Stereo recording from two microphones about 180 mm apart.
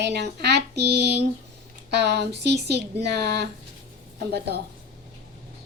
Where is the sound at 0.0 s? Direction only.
70° right (ahead or behind).